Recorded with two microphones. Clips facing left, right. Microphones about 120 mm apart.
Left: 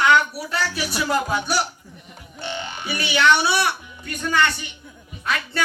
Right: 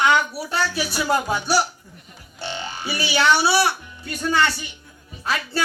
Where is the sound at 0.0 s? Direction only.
25° right (ahead or behind).